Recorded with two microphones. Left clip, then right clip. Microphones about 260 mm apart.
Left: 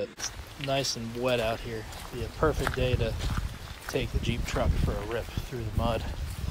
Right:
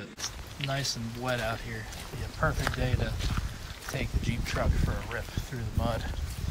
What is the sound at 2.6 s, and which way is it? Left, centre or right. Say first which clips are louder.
Speech: left 3 dB; centre.